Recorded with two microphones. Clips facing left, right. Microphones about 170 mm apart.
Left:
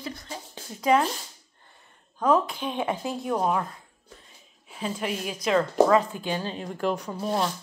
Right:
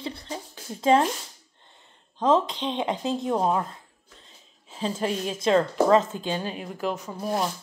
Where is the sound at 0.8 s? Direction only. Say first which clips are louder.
Right 2 dB; 30° right (ahead or behind).